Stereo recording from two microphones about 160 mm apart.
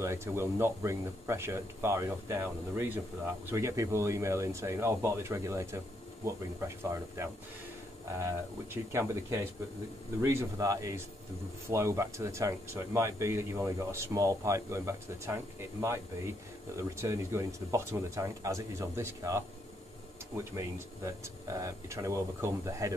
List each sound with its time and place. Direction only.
0.0 s speech: 15° right (ahead or behind)
8.9 s speech: 20° right (ahead or behind)
16.9 s speech: 15° right (ahead or behind)